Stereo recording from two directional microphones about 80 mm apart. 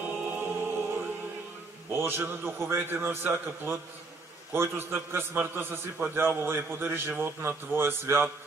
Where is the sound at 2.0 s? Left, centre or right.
Right.